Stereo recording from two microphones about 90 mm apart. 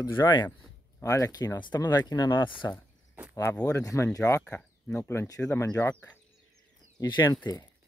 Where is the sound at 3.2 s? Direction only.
20° right (ahead or behind).